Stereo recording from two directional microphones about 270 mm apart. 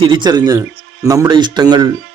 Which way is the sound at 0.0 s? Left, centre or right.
Centre.